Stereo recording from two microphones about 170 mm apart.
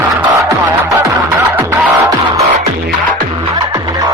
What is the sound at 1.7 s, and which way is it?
Music, 20° right (ahead or behind).